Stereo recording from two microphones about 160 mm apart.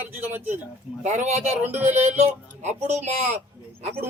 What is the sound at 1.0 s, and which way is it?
A man's voice, 45° right (ahead or behind).